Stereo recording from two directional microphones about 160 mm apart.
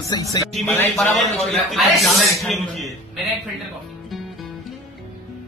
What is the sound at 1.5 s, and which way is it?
Speech, centre (ahead or behind).